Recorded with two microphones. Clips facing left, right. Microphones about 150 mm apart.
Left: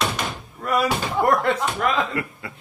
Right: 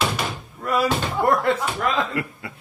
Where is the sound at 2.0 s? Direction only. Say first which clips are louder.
Even; 25° left (ahead or behind).